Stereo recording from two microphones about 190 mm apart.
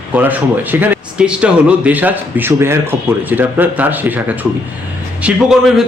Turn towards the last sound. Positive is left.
turn(degrees=-5)  # may be behind; listen again after turning